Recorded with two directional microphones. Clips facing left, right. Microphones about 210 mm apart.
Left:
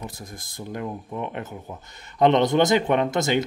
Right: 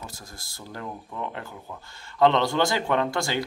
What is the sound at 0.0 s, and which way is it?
Speech, 20° left (ahead or behind).